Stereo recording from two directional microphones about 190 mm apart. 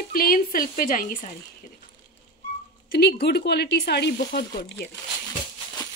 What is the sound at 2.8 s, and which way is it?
Speech, 55° left (ahead or behind).